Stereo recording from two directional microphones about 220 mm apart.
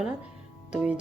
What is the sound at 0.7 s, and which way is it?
Speech, 5° right (ahead or behind).